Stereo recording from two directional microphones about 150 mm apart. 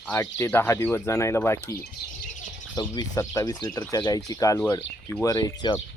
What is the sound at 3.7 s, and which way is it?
Speech, 5° left (ahead or behind).